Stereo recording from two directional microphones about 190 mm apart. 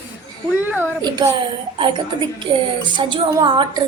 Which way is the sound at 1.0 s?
20° right (ahead or behind).